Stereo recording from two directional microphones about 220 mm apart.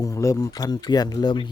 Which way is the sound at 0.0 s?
15° left (ahead or behind).